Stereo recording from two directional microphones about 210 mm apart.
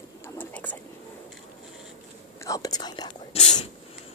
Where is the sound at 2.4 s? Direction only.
15° left (ahead or behind).